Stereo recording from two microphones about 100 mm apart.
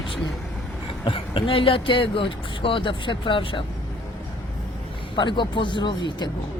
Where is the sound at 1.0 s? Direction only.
65° left (ahead or behind).